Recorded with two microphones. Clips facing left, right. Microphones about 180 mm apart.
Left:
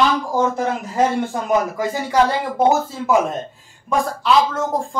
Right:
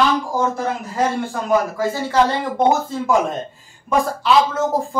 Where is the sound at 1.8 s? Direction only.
15° left (ahead or behind).